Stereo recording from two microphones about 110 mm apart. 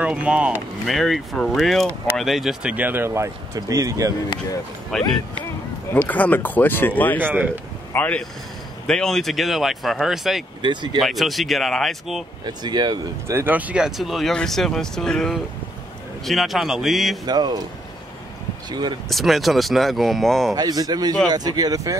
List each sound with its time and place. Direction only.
0.0 s speech: 10° right (ahead or behind)
0.8 s speech: centre (ahead or behind)
2.7 s speech: 15° right (ahead or behind)
4.9 s speech: 5° left (ahead or behind)
7.2 s speech: 20° right (ahead or behind)
7.9 s speech: 15° left (ahead or behind); by 10.4 s centre (ahead or behind)
10.6 s speech: 45° right (ahead or behind)
11.0 s speech: centre (ahead or behind)
12.4 s speech: 40° right (ahead or behind)
13.3 s speech: 20° right (ahead or behind); by 17.2 s centre (ahead or behind)
17.3 s speech: 40° right (ahead or behind)
18.7 s speech: 40° right (ahead or behind)
19.0 s speech: centre (ahead or behind)
20.5 s speech: 35° right (ahead or behind)